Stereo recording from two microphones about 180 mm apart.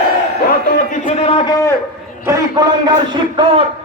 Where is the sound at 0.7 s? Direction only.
45° left (ahead or behind).